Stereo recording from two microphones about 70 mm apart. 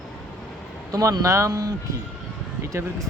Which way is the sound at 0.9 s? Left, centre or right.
Right.